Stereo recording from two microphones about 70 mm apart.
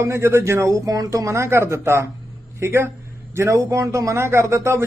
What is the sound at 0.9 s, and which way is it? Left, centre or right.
Speech, right.